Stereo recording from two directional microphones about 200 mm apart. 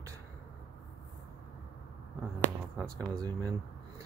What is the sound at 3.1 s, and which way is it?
Speech, 20° right (ahead or behind).